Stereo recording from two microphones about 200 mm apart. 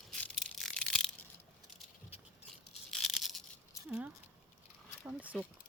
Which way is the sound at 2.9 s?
Centre (ahead or behind).